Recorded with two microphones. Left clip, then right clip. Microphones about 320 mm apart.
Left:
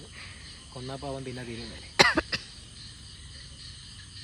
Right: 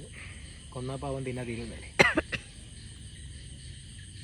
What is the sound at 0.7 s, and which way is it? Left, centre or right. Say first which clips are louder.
Speech: right 1 dB; centre.